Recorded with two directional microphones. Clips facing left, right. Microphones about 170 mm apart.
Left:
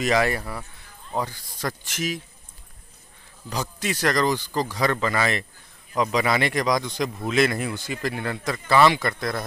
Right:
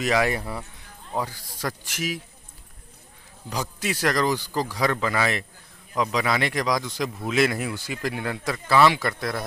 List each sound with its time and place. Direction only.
0.0 s speech: 5° right (ahead or behind)
0.3 s speech: 20° right (ahead or behind)
1.1 s speech: 10° right (ahead or behind)
3.5 s speech: 10° right (ahead or behind)